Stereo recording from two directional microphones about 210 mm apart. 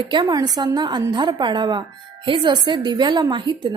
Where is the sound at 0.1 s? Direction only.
20° right (ahead or behind).